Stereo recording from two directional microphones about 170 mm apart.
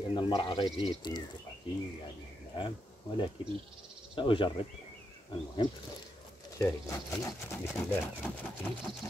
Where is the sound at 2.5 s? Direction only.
30° left (ahead or behind).